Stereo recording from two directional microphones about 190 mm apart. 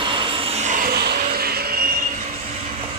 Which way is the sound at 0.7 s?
50° right (ahead or behind).